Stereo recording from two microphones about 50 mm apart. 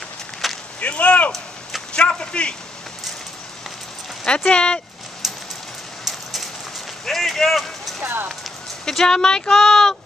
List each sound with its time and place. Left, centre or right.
0.4 s a sound: centre
0.7 s whip: left
4.5 s whip: centre
5.2 s rain: centre
7.1 s a sound: centre
8.0 s speech: right
8.8 s speech: centre